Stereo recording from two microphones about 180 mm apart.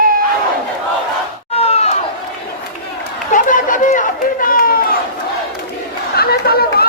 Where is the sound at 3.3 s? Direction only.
45° left (ahead or behind).